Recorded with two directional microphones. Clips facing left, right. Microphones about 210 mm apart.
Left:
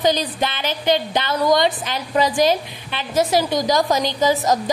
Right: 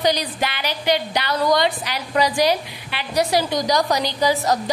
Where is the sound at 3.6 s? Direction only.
20° left (ahead or behind).